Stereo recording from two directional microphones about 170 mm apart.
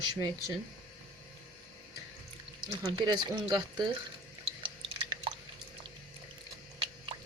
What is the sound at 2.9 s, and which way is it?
Speech, 25° right (ahead or behind).